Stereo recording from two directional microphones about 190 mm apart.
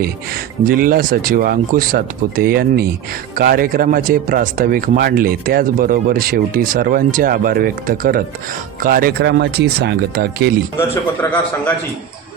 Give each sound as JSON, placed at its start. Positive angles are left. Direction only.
{"t": 0.6, "sound": "speech", "side_deg": -50}
{"t": 10.8, "sound": "a man's voice", "side_deg": 10}